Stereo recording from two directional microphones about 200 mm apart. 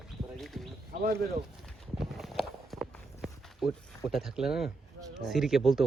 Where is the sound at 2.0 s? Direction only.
Centre (ahead or behind).